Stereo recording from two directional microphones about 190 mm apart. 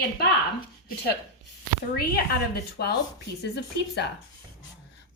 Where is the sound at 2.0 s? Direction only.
55° left (ahead or behind).